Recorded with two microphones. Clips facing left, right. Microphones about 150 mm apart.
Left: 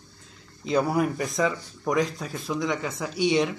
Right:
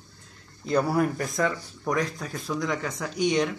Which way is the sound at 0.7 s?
Centre (ahead or behind).